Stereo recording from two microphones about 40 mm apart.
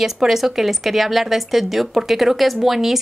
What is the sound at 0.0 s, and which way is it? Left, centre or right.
A woman's voice, centre.